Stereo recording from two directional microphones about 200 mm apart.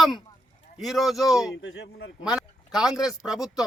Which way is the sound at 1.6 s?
60° left (ahead or behind).